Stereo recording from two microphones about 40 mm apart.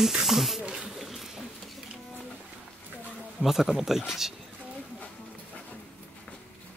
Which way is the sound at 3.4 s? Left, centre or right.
Centre.